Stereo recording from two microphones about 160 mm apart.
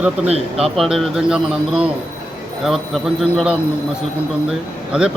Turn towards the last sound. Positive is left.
turn(degrees=-5)  # may be behind; listen again after turning